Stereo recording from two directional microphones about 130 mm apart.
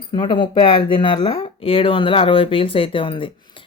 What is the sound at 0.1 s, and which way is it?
Speech, 40° left (ahead or behind).